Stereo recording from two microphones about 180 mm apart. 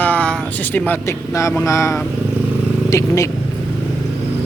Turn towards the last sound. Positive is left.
turn(degrees=20)  # may be behind; listen again after turning